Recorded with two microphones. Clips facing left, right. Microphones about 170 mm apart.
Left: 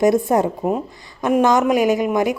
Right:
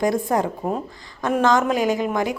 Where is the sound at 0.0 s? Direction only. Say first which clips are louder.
Left 5 dB; 20° left (ahead or behind).